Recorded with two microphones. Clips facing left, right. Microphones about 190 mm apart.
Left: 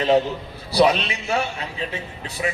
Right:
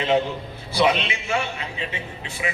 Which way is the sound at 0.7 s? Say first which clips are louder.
Left 3 dB; 40° left (ahead or behind).